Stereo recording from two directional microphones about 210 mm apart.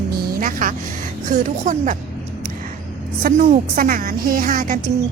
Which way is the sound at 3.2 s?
40° right (ahead or behind).